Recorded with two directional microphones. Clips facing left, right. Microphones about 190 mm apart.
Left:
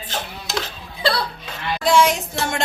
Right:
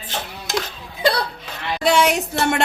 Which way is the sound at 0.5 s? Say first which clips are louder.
Right 3 dB; 15° right (ahead or behind).